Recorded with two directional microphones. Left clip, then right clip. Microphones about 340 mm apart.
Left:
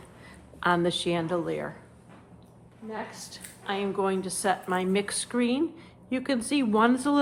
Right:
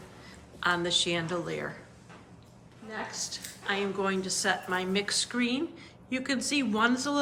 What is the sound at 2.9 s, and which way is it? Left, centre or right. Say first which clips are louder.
A woman's voice: right 1 dB; left.